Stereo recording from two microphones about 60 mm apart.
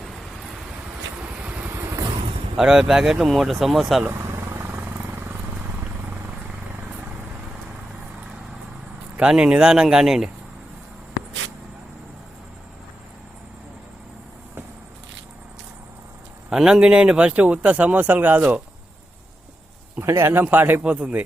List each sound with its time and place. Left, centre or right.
1.4 s vehicle: right
2.6 s speech: centre
4.2 s vehicle: right
4.7 s vehicle: right
9.3 s speech: centre
16.5 s speech: centre; by 18.6 s right
20.0 s speech: right
20.4 s speech: right
20.8 s speech: right